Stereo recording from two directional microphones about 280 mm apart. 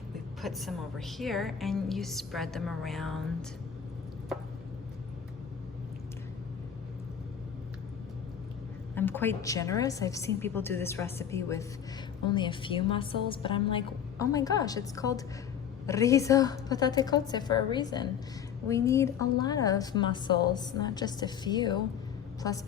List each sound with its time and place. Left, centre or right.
0.4 s a woman's voice: centre
9.0 s a woman's voice: centre